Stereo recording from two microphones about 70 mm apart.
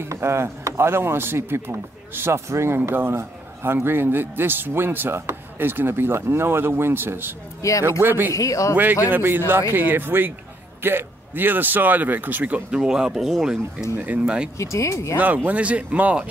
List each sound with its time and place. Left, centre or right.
0.1 s speech: right
7.6 s speech: left
8.0 s speech: right
8.3 s speech: left
9.1 s speech: right
12.7 s speech: centre
13.9 s speech: right
14.6 s speech: left
15.1 s speech: right